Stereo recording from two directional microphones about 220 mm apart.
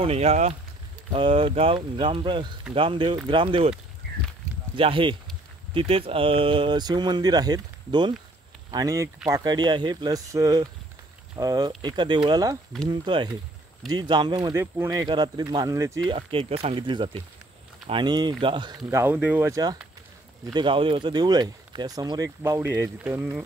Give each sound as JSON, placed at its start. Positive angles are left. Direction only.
{"t": 0.0, "sound": "speech", "side_deg": -30}
{"t": 4.7, "sound": "speech", "side_deg": -25}
{"t": 16.1, "sound": "speech", "side_deg": -25}